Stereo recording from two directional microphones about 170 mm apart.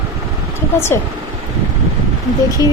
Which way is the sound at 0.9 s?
15° left (ahead or behind).